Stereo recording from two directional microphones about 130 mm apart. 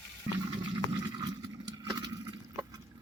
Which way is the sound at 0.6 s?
35° right (ahead or behind).